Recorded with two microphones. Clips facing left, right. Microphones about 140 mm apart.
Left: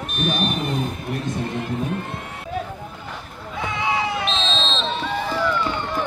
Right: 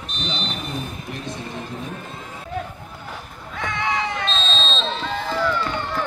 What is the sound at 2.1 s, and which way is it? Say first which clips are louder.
Run: left 3 dB; 65° left (ahead or behind).